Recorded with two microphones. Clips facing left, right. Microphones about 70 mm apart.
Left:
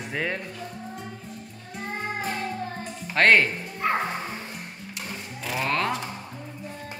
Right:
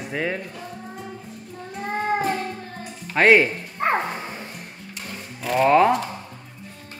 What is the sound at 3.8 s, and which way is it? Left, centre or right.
Music, right.